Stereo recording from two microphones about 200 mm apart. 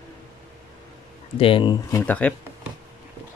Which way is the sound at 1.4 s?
25° left (ahead or behind).